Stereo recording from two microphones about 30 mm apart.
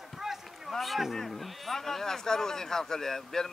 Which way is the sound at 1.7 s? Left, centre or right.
Centre.